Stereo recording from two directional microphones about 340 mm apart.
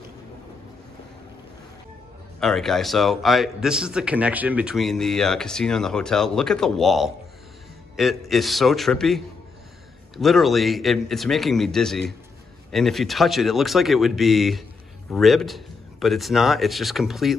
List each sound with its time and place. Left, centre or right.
2.4 s a man's voice: centre